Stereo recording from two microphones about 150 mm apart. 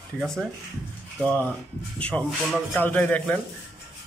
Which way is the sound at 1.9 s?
10° left (ahead or behind).